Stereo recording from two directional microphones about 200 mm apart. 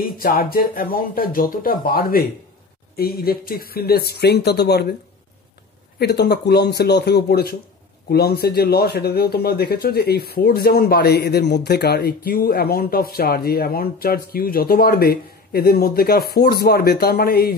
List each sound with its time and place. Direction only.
0.0 s speech: 50° left (ahead or behind)
5.9 s speech: 55° left (ahead or behind)